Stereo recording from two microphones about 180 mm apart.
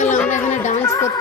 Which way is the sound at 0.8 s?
15° left (ahead or behind).